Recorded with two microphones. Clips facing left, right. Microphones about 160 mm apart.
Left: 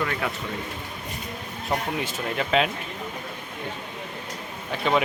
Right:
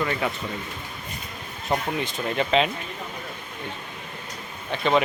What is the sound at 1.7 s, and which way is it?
Speech, 5° left (ahead or behind).